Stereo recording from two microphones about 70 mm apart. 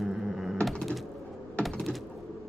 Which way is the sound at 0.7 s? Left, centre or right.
Centre.